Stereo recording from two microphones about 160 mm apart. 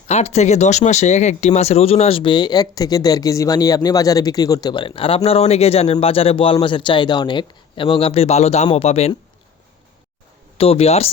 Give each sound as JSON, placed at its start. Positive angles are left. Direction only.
{"t": 0.1, "sound": "speech", "side_deg": 45}
{"t": 10.6, "sound": "speech", "side_deg": 40}